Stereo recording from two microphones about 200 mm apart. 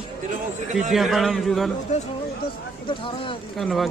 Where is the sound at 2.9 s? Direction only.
25° left (ahead or behind).